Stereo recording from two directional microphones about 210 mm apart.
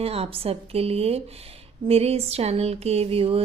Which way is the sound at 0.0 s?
30° right (ahead or behind).